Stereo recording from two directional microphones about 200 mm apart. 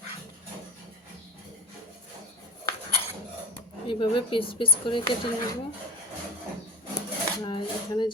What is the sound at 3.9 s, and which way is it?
Speech, 25° left (ahead or behind).